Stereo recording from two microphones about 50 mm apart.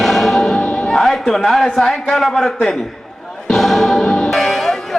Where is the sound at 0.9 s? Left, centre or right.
Centre.